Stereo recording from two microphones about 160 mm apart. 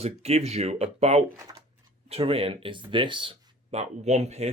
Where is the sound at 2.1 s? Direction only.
35° right (ahead or behind).